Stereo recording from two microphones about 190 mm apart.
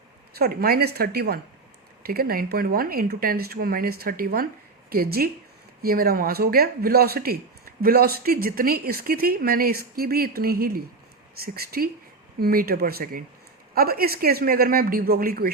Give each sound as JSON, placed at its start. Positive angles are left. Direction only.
{"t": 0.3, "sound": "a woman's voice", "side_deg": -55}